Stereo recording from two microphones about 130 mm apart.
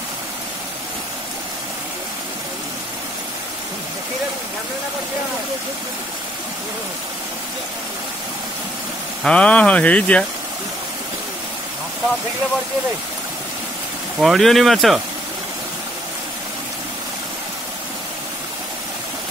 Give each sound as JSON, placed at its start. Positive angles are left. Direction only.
{"t": 9.2, "sound": "speech", "side_deg": 10}
{"t": 14.1, "sound": "speech", "side_deg": 0}